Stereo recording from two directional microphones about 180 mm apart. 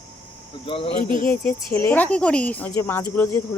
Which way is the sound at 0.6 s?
30° left (ahead or behind).